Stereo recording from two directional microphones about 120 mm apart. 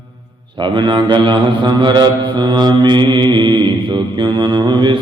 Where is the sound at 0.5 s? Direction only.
40° right (ahead or behind).